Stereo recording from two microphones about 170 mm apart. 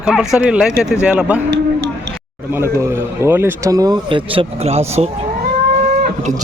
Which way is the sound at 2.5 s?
15° right (ahead or behind).